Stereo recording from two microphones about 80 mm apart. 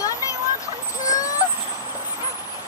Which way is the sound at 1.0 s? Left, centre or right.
Left.